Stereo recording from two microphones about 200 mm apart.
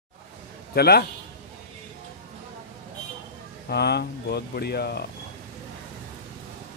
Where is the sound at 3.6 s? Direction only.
55° left (ahead or behind).